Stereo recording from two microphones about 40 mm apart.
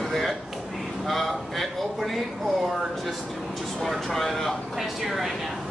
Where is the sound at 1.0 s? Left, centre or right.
Centre.